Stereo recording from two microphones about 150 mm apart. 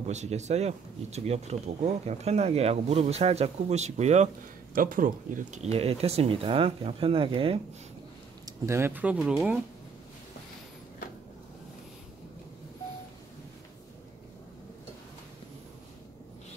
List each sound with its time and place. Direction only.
0.0 s speech: 50° right (ahead or behind)
4.7 s speech: 70° right (ahead or behind); by 7.6 s 40° right (ahead or behind)
8.5 s speech: 20° right (ahead or behind)